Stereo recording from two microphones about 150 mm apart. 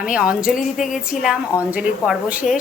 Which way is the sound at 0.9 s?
5° right (ahead or behind).